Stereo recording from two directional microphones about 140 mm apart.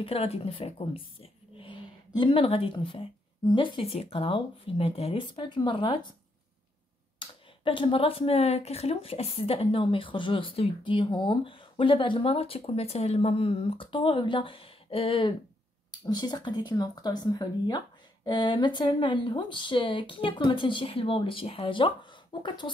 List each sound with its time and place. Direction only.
0.0 s speech: 45° left (ahead or behind)
7.2 s speech: 35° left (ahead or behind)